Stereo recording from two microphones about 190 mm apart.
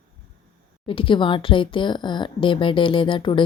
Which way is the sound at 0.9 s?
25° left (ahead or behind).